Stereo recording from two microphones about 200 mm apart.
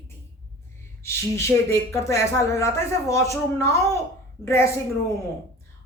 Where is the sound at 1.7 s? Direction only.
15° left (ahead or behind).